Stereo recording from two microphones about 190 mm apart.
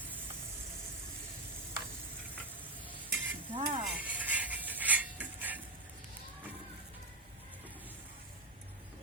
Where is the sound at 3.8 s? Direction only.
10° right (ahead or behind).